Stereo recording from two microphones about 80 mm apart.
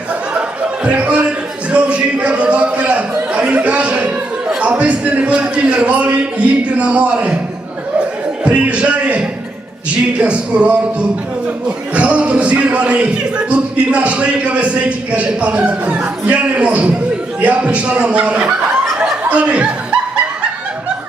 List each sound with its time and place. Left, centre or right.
0.3 s a sound: centre
6.7 s a man's voice: centre
8.4 s a man's voice: centre
11.9 s a man's voice: centre
19.3 s chuckle: centre